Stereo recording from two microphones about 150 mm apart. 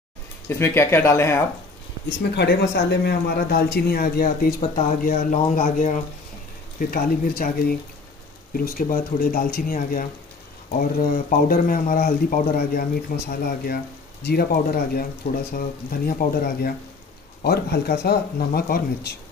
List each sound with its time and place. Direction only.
0.5 s speech: 15° left (ahead or behind)
2.3 s speech: 90° left
4.6 s speech: 50° left (ahead or behind)
6.8 s speech: 70° left (ahead or behind)
14.2 s speech: 85° left
17.4 s speech: 90° left